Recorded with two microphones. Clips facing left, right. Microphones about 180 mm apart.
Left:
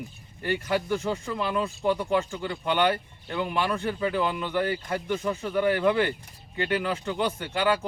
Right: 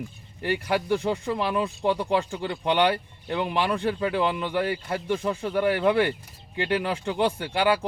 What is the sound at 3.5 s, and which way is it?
Speech, 20° right (ahead or behind).